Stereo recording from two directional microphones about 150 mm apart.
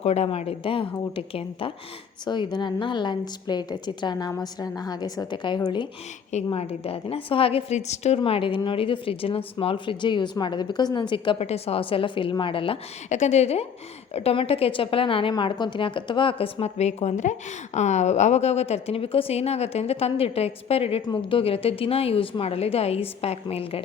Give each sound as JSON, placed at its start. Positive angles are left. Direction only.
{"t": 0.0, "sound": "a woman's voice", "side_deg": 45}
{"t": 6.5, "sound": "a woman's voice", "side_deg": 40}
{"t": 13.1, "sound": "a woman's voice", "side_deg": 50}
{"t": 21.0, "sound": "a woman's voice", "side_deg": 30}